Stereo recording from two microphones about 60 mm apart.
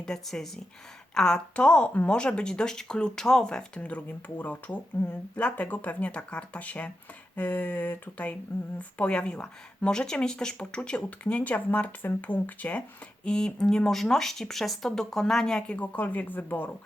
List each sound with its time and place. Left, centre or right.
0.0 s speech: centre
3.8 s speech: left
13.2 s speech: centre; by 16.7 s left